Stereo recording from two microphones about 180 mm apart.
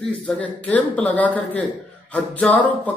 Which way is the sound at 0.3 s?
10° left (ahead or behind).